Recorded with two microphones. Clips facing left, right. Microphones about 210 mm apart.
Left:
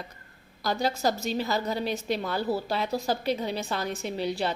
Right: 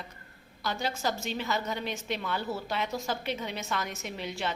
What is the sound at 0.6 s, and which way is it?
A woman's voice, 40° left (ahead or behind).